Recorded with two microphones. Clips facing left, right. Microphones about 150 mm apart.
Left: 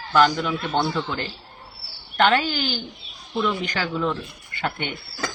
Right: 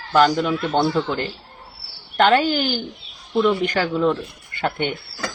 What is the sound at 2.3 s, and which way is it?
Speech, 50° right (ahead or behind).